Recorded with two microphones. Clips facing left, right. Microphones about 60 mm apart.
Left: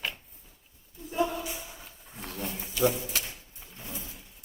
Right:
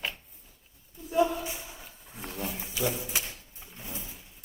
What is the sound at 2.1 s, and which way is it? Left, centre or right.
Wild animals, centre.